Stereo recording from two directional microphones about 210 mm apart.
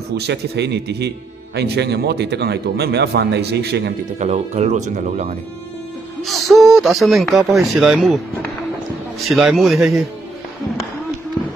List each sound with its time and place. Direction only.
0.1 s a man's voice: 55° right (ahead or behind)
4.2 s speech: 30° right (ahead or behind)
6.2 s speech: centre (ahead or behind)
9.2 s speech: centre (ahead or behind)